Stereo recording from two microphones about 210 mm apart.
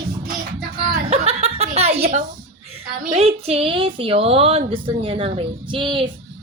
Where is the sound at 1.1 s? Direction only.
30° right (ahead or behind).